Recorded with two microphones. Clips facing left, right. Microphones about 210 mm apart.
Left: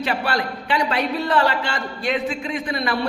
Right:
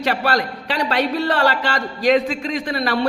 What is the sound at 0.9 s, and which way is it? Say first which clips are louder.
A man's voice: right 3 dB; 70° right (ahead or behind).